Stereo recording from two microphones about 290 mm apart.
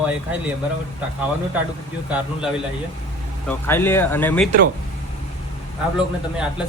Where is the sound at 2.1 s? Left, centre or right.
Centre.